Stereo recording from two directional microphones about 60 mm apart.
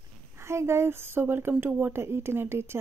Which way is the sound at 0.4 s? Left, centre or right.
Right.